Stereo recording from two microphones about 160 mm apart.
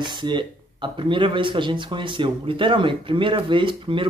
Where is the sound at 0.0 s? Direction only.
30° right (ahead or behind).